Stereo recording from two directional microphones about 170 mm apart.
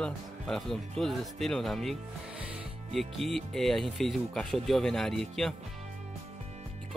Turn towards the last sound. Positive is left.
turn(degrees=0)  # may be behind; listen again after turning